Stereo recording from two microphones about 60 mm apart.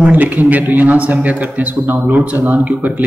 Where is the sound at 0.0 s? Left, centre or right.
Right.